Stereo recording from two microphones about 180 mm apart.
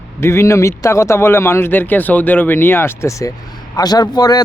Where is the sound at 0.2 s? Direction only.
15° left (ahead or behind).